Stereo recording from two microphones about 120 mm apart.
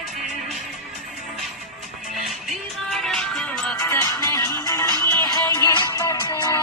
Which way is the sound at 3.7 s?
25° left (ahead or behind).